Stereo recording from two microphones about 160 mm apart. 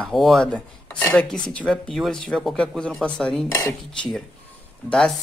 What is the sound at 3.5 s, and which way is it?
Dishes, 20° left (ahead or behind).